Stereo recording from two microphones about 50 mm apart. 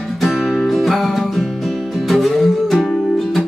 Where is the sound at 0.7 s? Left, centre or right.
Centre.